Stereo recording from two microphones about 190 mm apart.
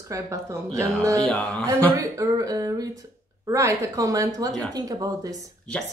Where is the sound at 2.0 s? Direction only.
15° right (ahead or behind).